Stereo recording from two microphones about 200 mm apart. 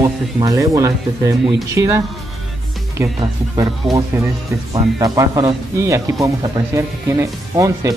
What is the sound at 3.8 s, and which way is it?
Music, centre (ahead or behind).